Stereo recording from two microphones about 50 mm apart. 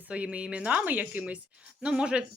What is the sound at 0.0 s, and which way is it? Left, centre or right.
Speech, right.